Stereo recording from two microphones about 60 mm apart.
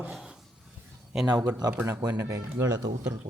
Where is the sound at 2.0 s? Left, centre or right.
Right.